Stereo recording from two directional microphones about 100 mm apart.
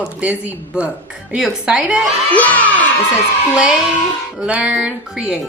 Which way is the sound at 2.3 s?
15° left (ahead or behind).